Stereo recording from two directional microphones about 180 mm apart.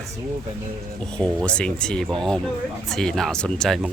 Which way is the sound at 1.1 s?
5° left (ahead or behind).